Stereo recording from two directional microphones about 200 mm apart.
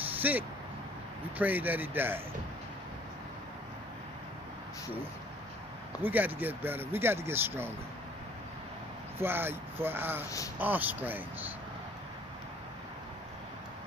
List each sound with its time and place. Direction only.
0.2 s speech: 10° right (ahead or behind)
6.0 s speech: 10° right (ahead or behind)
9.1 s speech: 10° right (ahead or behind)
10.2 s a man's voice: 15° left (ahead or behind)
10.6 s speech: 10° right (ahead or behind)